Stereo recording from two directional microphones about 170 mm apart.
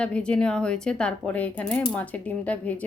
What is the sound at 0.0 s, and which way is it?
A woman's voice, 5° left (ahead or behind).